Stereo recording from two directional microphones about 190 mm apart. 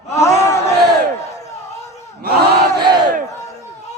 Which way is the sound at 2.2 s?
55° right (ahead or behind).